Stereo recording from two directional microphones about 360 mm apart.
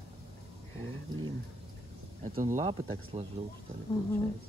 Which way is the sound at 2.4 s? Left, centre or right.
Centre.